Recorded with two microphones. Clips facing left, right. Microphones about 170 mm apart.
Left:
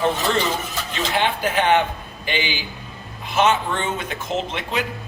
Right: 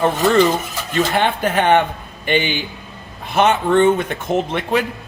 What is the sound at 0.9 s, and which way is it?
A man's voice, 55° right (ahead or behind).